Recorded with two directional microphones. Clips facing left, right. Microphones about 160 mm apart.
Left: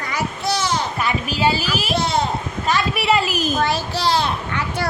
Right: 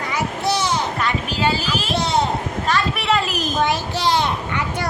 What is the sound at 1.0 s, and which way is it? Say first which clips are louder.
Speech: left 1 dB; 10° left (ahead or behind).